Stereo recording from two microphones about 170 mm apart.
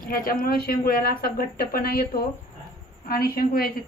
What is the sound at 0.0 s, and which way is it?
A woman's voice, 60° left (ahead or behind).